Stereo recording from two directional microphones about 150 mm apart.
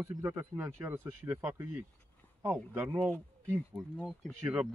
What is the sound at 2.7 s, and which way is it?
Speech, 15° right (ahead or behind).